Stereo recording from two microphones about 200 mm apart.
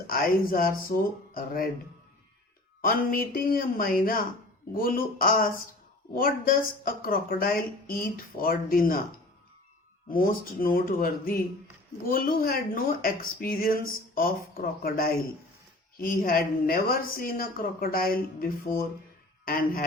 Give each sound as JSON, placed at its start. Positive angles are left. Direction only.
{"t": 0.1, "sound": "a woman's voice", "side_deg": 45}
{"t": 2.8, "sound": "a woman's voice", "side_deg": 45}
{"t": 10.1, "sound": "a woman's voice", "side_deg": 45}